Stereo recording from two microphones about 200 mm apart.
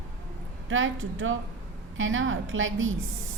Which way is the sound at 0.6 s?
80° right.